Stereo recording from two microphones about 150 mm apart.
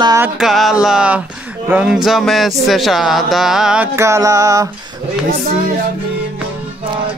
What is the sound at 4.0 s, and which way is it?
Speech, 20° right (ahead or behind).